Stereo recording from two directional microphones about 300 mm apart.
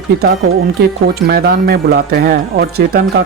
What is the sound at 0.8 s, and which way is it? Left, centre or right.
Speech, right.